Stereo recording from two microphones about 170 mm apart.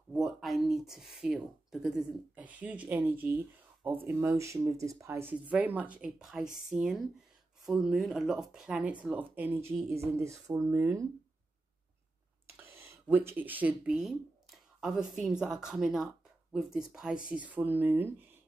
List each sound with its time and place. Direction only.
0.1 s speech: centre (ahead or behind); by 11.1 s 15° right (ahead or behind)
12.5 s speech: 15° right (ahead or behind)